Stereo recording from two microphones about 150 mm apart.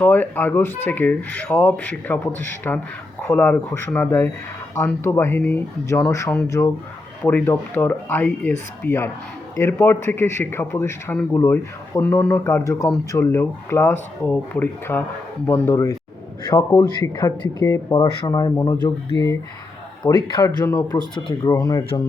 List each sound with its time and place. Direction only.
0.0 s speech: 10° left (ahead or behind); by 18.3 s 30° left (ahead or behind)
18.5 s speech: 15° left (ahead or behind)
20.0 s speech: 25° left (ahead or behind)